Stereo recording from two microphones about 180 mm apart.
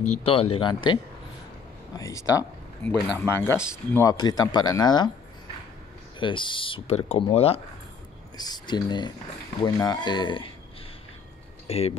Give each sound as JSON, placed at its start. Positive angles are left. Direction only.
{"t": 0.0, "sound": "speech", "side_deg": 35}
{"t": 2.0, "sound": "speech", "side_deg": 20}
{"t": 6.1, "sound": "speech", "side_deg": 25}
{"t": 8.4, "sound": "speech", "side_deg": 25}
{"t": 11.6, "sound": "a sound", "side_deg": 35}